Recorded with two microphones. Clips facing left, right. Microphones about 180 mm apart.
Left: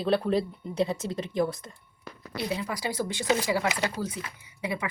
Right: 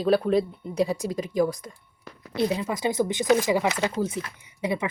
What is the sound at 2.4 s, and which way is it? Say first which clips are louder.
A woman's voice: right 5 dB; 25° right (ahead or behind).